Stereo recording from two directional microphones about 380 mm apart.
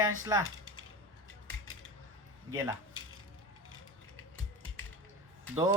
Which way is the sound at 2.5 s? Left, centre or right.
Centre.